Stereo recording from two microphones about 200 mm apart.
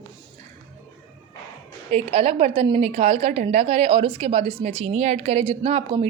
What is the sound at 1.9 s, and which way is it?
A woman's voice, 30° right (ahead or behind).